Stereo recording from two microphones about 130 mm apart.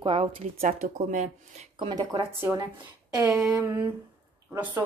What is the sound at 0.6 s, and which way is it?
Speech, 85° right.